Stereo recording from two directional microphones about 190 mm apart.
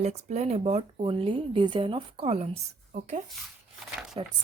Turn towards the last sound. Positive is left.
turn(degrees=-25)  # may be behind; listen again after turning